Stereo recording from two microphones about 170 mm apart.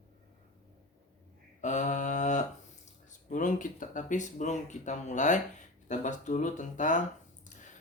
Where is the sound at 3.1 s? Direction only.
50° left (ahead or behind).